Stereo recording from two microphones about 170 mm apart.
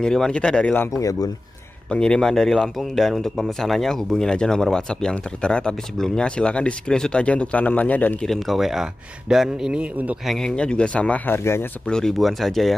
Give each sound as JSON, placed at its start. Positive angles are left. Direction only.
{"t": 0.0, "sound": "speech", "side_deg": 5}
{"t": 0.9, "sound": "speech", "side_deg": 20}
{"t": 1.9, "sound": "speech", "side_deg": 5}
{"t": 10.3, "sound": "speech", "side_deg": 5}